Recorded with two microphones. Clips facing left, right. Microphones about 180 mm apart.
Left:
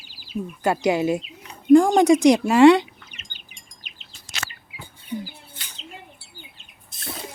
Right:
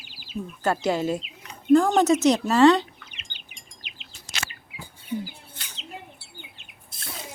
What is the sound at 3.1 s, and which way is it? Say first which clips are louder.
Bird: left 1 dB; 45° left (ahead or behind).